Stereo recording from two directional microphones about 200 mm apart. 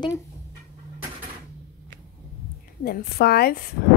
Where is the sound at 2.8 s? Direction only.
55° left (ahead or behind).